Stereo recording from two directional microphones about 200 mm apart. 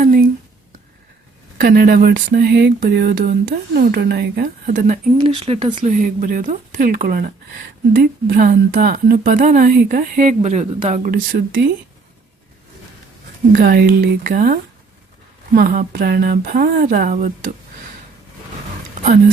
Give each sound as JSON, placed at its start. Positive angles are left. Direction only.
{"t": 0.0, "sound": "a sound", "side_deg": -45}
{"t": 1.5, "sound": "a woman's voice", "side_deg": -50}
{"t": 5.1, "sound": "speech", "side_deg": -30}
{"t": 5.8, "sound": "a woman's voice", "side_deg": -40}
{"t": 13.5, "sound": "a woman's voice", "side_deg": -50}